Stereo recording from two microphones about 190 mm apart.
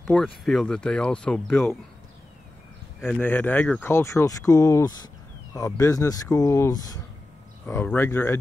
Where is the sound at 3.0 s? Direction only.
10° left (ahead or behind).